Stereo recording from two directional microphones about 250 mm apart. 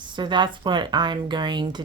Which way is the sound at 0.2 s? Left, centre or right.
Centre.